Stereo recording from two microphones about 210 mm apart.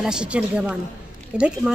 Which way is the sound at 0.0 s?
5° right (ahead or behind).